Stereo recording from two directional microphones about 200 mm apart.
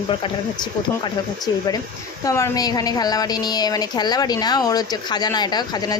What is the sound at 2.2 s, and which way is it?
A woman's voice, 15° left (ahead or behind).